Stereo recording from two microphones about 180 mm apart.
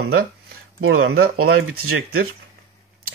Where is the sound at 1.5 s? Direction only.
90° right.